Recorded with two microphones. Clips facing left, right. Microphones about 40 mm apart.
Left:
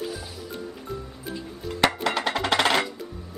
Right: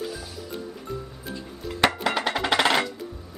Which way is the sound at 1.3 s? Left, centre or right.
Centre.